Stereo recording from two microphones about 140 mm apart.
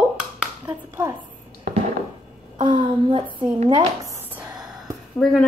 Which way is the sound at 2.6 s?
35° right (ahead or behind).